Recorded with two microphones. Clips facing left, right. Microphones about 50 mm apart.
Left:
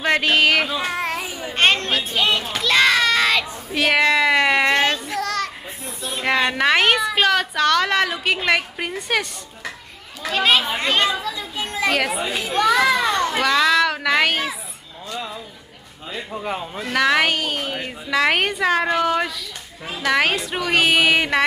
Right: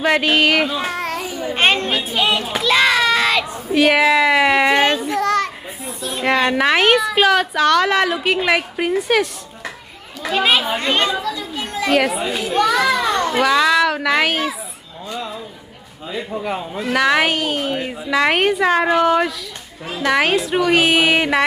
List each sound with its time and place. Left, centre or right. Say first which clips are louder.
0.0 s speech: right 2 dB; centre
1.0 s babbling: right 3 dB; centre
1.5 s a child's voice: right 1 dB; centre
5.2 s children playing: right 7 dB; right
5.8 s speech: right 3 dB; centre
11.3 s chatter: right 1 dB; centre
11.9 s speech: right 5 dB; centre
16.9 s speech: right 2 dB; centre